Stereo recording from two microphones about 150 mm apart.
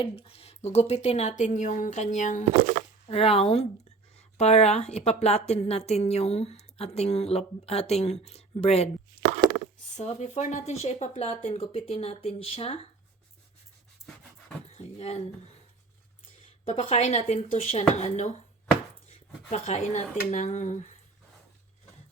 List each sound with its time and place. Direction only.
0.0 s a woman's voice: 40° left (ahead or behind); by 2.4 s 55° left (ahead or behind)
2.4 s speech: 55° right (ahead or behind)
3.1 s a woman's voice: 40° left (ahead or behind)
10.0 s a woman's voice: 50° left (ahead or behind)
14.7 s a sound: 45° left (ahead or behind)
16.6 s a woman's voice: 45° left (ahead or behind)